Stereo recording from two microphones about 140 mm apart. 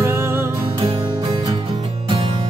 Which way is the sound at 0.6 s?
40° right (ahead or behind).